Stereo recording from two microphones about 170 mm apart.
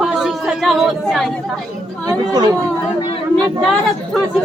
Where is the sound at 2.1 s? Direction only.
20° right (ahead or behind).